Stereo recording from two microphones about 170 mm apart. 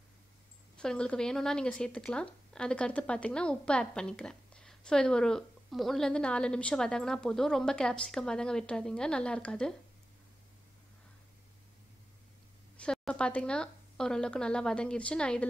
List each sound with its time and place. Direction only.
0.7 s a woman's voice: 5° left (ahead or behind)
12.7 s a woman's voice: 5° left (ahead or behind)